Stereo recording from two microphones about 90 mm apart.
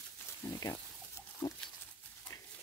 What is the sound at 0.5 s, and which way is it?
Speech, 35° left (ahead or behind).